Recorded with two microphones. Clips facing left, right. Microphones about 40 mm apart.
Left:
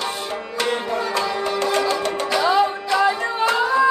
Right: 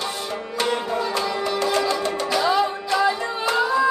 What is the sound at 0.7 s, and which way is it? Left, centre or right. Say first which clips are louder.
Music: left 1 dB; left.